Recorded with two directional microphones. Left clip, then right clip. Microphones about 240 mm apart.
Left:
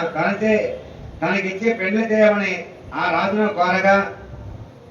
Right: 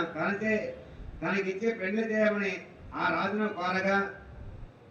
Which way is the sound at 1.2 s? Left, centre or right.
Right.